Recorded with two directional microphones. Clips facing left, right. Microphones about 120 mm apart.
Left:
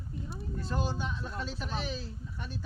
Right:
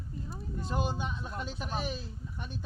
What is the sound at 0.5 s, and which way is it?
Speech, 15° right (ahead or behind).